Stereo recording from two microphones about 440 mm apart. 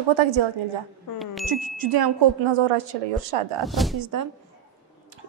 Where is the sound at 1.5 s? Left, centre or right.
Right.